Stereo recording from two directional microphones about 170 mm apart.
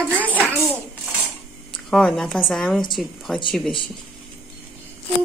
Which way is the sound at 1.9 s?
5° left (ahead or behind).